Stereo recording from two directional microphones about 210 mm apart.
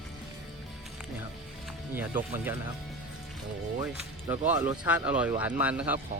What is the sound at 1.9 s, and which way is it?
Speech, 10° right (ahead or behind).